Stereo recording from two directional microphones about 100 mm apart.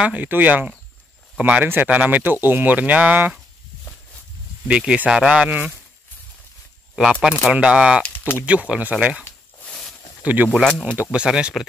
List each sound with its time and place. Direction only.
0.0 s speech: 15° right (ahead or behind)
4.6 s speech: 10° right (ahead or behind)
7.0 s speech: centre (ahead or behind)
7.5 s speech: 10° right (ahead or behind)
9.7 s a sound: 5° left (ahead or behind)
10.2 s speech: 15° right (ahead or behind)
10.6 s speech: 5° left (ahead or behind)
11.0 s speech: 10° right (ahead or behind)